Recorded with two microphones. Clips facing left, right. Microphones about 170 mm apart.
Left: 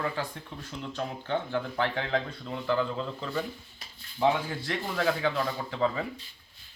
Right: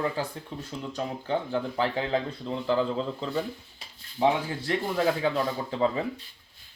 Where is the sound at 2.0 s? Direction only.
30° right (ahead or behind).